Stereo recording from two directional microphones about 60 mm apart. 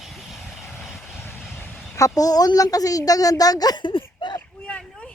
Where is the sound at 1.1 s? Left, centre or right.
Left.